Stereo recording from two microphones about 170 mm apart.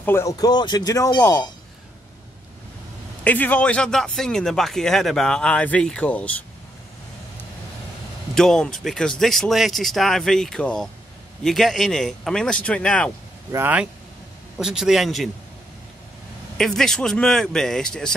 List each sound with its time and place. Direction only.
0.0 s speech: 15° left (ahead or behind)
3.3 s speech: 10° left (ahead or behind)
8.4 s speech: 5° left (ahead or behind)
13.5 s speech: 10° right (ahead or behind)
16.5 s speech: 5° left (ahead or behind)